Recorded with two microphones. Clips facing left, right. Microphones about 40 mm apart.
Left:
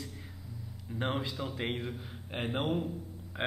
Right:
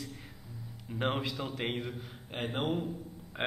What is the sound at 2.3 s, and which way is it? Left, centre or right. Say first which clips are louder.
Speech: left 1 dB; centre.